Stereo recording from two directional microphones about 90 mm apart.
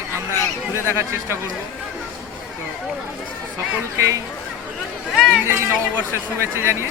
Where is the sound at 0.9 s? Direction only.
30° right (ahead or behind).